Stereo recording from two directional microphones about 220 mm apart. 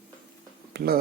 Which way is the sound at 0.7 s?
45° right (ahead or behind).